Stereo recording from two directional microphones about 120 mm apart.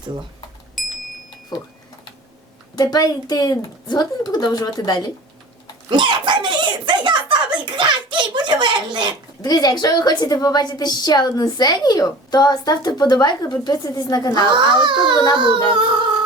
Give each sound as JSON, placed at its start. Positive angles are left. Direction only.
{"t": 0.8, "sound": "clock", "side_deg": 0}
{"t": 2.7, "sound": "a woman's voice", "side_deg": 35}
{"t": 5.9, "sound": "a child's voice", "side_deg": -40}
{"t": 9.4, "sound": "a woman's voice", "side_deg": 35}
{"t": 14.4, "sound": "a child's voice", "side_deg": -40}
{"t": 15.1, "sound": "a woman's voice", "side_deg": 35}
{"t": 15.7, "sound": "a child's voice", "side_deg": -40}